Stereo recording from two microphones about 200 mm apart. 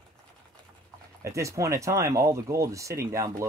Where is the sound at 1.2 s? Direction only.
15° right (ahead or behind).